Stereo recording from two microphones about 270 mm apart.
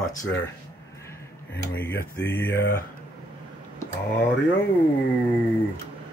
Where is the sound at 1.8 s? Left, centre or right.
Centre.